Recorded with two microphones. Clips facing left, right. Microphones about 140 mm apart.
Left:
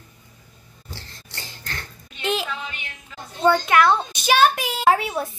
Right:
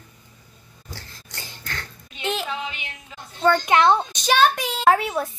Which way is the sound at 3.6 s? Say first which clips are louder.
Even; 20° right (ahead or behind).